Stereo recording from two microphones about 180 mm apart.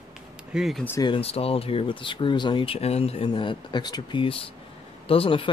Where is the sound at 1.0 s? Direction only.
30° left (ahead or behind).